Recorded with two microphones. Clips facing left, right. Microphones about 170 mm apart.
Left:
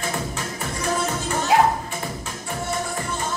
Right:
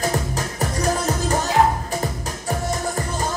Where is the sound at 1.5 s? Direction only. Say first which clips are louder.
Left 1 dB; 85° left.